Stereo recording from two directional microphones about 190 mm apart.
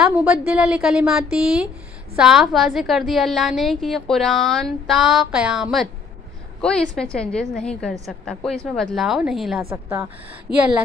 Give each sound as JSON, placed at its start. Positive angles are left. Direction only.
{"t": 0.0, "sound": "a woman's voice", "side_deg": -5}
{"t": 9.7, "sound": "a woman's voice", "side_deg": -15}
{"t": 10.5, "sound": "speech", "side_deg": 25}